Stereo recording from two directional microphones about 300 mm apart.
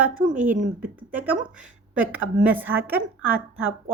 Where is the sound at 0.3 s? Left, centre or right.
Right.